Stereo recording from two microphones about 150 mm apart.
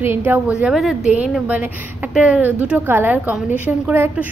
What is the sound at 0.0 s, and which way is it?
A woman's voice, 15° right (ahead or behind).